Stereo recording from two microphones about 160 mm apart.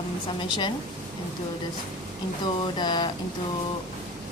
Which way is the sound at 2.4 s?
25° left (ahead or behind).